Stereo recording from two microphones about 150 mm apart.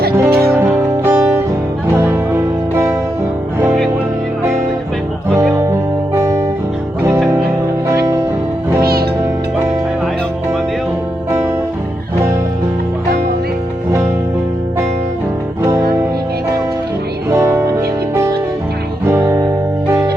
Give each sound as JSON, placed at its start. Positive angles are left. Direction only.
{"t": 0.3, "sound": "music", "side_deg": -90}
{"t": 0.5, "sound": "music", "side_deg": -15}
{"t": 6.1, "sound": "guitar", "side_deg": -20}
{"t": 8.8, "sound": "music", "side_deg": -90}
{"t": 17.2, "sound": "music", "side_deg": -15}